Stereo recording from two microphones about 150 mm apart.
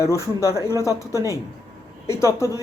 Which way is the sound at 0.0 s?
20° left (ahead or behind).